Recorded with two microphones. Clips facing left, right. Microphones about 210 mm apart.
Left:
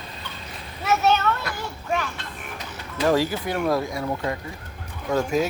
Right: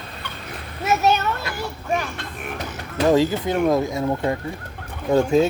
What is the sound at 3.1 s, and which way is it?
Speech, 20° right (ahead or behind).